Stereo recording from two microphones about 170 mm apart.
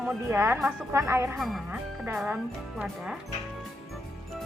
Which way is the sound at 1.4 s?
Centre (ahead or behind).